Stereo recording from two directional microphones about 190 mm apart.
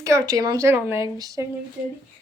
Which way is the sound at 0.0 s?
15° right (ahead or behind).